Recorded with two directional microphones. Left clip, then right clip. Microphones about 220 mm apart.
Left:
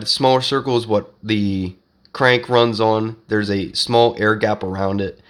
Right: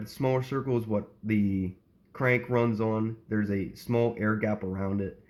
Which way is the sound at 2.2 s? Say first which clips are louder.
Left 12 dB; 45° left (ahead or behind).